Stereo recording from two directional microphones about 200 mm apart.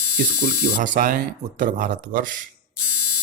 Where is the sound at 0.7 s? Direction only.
40° right (ahead or behind).